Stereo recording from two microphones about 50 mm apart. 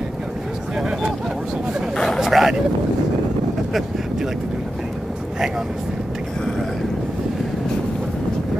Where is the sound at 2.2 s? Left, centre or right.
Centre.